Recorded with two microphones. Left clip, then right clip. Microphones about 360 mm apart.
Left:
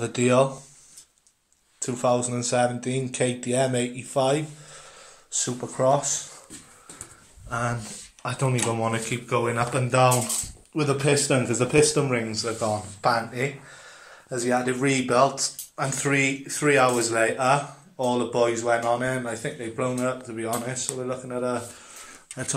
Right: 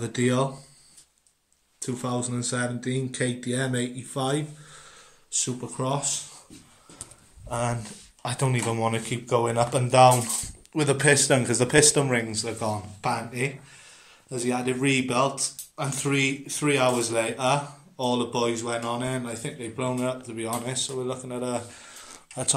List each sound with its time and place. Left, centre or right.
0.0 s speech: centre
1.8 s speech: centre
7.4 s speech: centre